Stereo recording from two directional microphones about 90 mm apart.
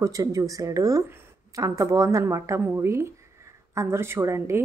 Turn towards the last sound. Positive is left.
turn(degrees=-30)  # may be behind; listen again after turning